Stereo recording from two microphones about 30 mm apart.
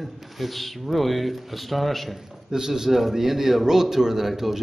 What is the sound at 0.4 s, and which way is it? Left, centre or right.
Speech, centre.